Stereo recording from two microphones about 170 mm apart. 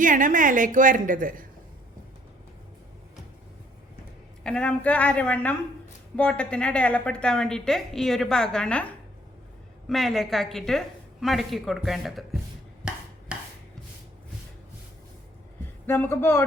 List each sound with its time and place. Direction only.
0.0 s a woman's voice: 50° right (ahead or behind)
4.4 s a woman's voice: 5° left (ahead or behind)
12.8 s a sound: 5° right (ahead or behind)
15.9 s a woman's voice: 15° left (ahead or behind)